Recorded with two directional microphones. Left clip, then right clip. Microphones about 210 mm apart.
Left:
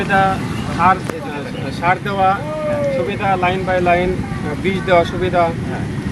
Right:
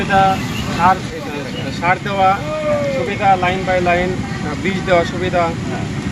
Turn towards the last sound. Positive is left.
turn(degrees=10)  # may be behind; listen again after turning